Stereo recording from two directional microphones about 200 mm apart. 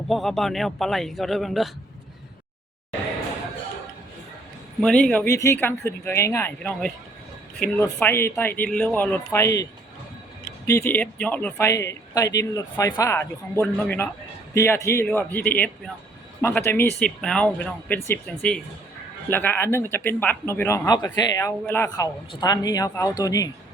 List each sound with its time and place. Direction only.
0.1 s a man's voice: centre (ahead or behind)
4.8 s speech: 5° left (ahead or behind)
10.7 s speech: 10° left (ahead or behind)